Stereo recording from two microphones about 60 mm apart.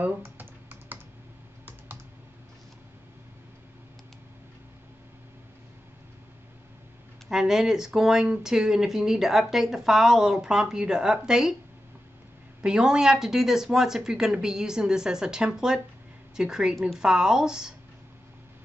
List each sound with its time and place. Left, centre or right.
0.2 s computer keyboard: right
7.2 s speech: centre
12.6 s speech: centre